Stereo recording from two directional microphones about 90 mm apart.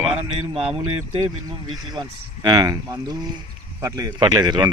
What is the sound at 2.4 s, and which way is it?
Speech, 50° right (ahead or behind).